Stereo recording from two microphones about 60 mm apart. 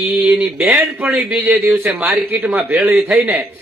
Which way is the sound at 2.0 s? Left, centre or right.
Right.